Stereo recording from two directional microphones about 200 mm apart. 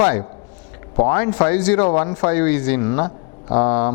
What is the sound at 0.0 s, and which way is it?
Speech, 10° left (ahead or behind).